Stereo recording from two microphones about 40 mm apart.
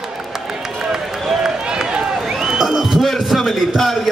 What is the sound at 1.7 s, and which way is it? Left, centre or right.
Run, centre.